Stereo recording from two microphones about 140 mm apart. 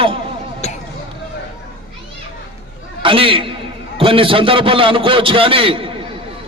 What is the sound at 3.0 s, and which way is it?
A man's voice, 40° right (ahead or behind).